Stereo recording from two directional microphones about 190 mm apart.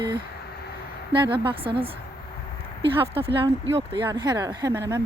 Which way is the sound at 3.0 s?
30° right (ahead or behind).